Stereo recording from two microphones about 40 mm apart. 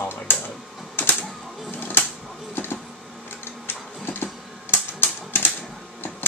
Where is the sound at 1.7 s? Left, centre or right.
Left.